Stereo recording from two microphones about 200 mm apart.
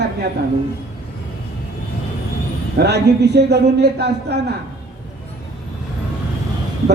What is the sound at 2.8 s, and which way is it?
A woman's voice, 55° right (ahead or behind).